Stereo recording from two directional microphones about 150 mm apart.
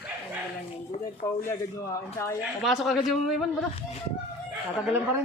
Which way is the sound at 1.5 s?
20° left (ahead or behind).